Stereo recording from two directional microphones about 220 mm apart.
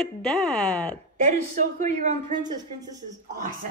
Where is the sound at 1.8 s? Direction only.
35° right (ahead or behind).